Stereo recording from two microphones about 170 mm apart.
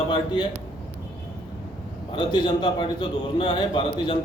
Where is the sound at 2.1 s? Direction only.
30° left (ahead or behind).